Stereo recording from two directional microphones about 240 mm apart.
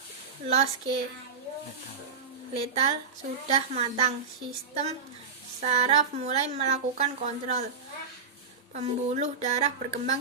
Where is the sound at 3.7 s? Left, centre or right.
Right.